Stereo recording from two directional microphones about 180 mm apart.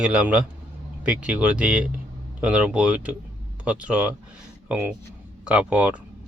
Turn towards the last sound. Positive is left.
turn(degrees=-5)  # may be behind; listen again after turning